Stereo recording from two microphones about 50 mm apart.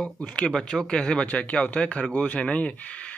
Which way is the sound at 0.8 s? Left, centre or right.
Centre.